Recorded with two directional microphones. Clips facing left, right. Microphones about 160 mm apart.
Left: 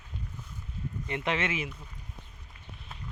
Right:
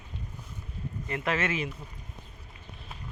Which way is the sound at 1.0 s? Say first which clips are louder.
Right 1 dB; 20° left (ahead or behind).